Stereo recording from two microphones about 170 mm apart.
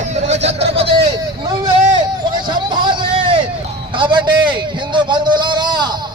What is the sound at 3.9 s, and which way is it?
Speech, 25° right (ahead or behind).